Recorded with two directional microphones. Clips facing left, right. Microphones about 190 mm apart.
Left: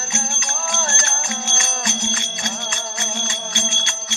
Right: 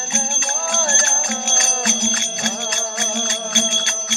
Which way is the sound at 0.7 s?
40° right (ahead or behind).